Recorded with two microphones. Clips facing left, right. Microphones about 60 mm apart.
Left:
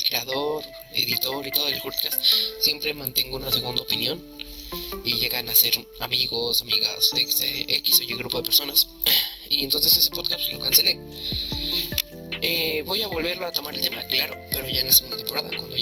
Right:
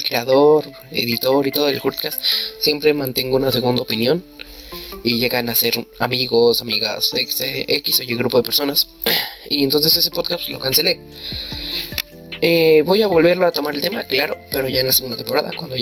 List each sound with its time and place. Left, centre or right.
0.0 s speech: right